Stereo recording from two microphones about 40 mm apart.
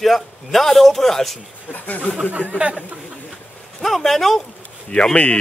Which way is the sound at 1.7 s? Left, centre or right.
Left.